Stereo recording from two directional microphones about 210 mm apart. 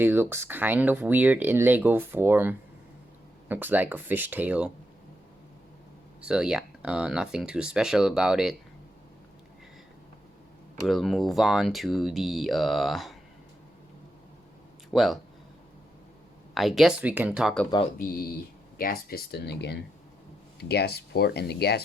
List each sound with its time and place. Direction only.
0.0 s speech: 10° right (ahead or behind)
6.2 s speech: 5° right (ahead or behind)
10.8 s speech: centre (ahead or behind)
14.8 s speech: centre (ahead or behind)
16.6 s speech: centre (ahead or behind)
18.8 s speech: 45° left (ahead or behind)